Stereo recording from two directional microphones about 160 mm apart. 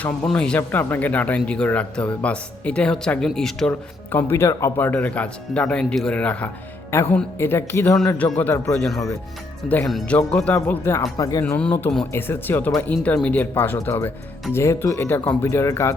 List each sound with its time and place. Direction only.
0.0 s speech: 5° left (ahead or behind)
9.6 s speech: 5° left (ahead or behind); by 11.4 s 25° left (ahead or behind)
11.4 s speech: 10° left (ahead or behind)
12.1 s speech: 15° left (ahead or behind)